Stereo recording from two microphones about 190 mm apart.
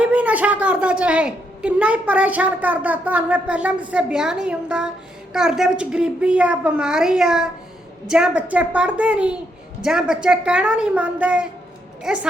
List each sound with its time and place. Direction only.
0.0 s a woman's voice: 5° right (ahead or behind)